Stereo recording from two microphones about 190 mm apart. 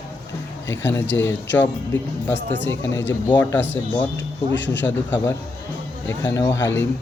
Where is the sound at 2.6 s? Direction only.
80° left.